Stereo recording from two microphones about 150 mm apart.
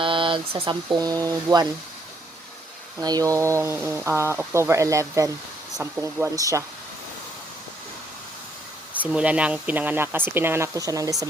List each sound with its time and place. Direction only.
0.0 s speech: 35° right (ahead or behind)
3.0 s speech: 25° right (ahead or behind)
9.0 s speech: 10° right (ahead or behind)